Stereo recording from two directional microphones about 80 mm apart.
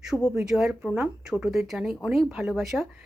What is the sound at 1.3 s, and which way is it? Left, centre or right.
Speech, centre.